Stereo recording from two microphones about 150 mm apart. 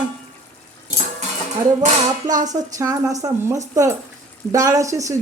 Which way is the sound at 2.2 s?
25° right (ahead or behind).